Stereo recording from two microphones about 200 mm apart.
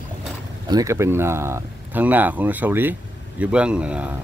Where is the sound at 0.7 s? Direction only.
15° right (ahead or behind).